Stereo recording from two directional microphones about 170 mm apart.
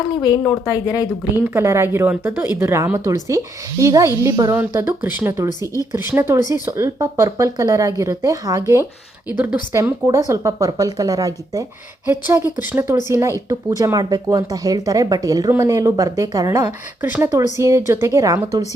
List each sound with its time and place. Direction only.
0.2 s speech: 25° left (ahead or behind)
1.4 s speech: 15° right (ahead or behind)
17.0 s speech: 10° right (ahead or behind)